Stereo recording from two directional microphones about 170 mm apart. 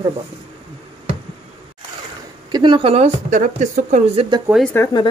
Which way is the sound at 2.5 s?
25° right (ahead or behind).